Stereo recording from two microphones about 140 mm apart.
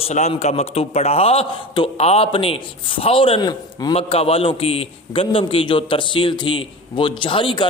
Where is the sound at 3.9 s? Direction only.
45° left (ahead or behind).